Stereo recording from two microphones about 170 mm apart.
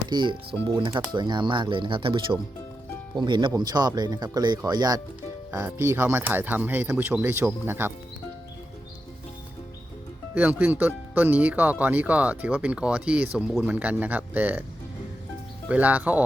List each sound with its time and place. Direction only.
0.1 s speech: 25° right (ahead or behind)
10.3 s speech: 10° right (ahead or behind)
15.7 s speech: 10° right (ahead or behind)